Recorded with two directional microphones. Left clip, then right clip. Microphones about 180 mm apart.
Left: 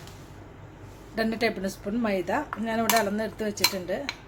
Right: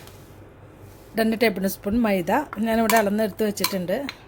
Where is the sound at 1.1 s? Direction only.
40° right (ahead or behind).